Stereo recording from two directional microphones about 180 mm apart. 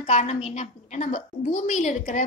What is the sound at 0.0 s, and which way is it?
A woman's voice, 40° left (ahead or behind).